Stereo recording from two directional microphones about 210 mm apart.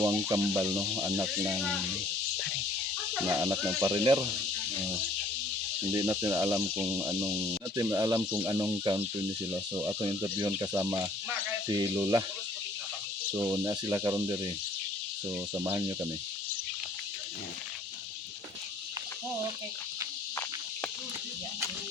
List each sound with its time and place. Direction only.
0.0 s cricket: 15° right (ahead or behind)
1.5 s speech: centre (ahead or behind)
3.2 s cricket: 15° right (ahead or behind)
3.8 s insect: 15° right (ahead or behind)
5.9 s cricket: 15° right (ahead or behind)
9.8 s insect: 20° right (ahead or behind)
10.3 s speech: 15° right (ahead or behind)
13.3 s cricket: 15° right (ahead or behind)
15.6 s cricket: 15° right (ahead or behind)